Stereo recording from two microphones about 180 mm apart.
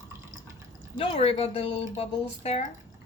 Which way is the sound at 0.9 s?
35° left (ahead or behind).